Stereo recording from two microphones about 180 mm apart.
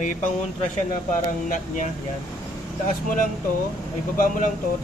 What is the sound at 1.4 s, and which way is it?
Speech, 45° left (ahead or behind).